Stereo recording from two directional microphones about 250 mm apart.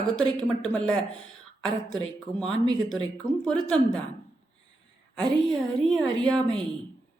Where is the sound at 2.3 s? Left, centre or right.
Centre.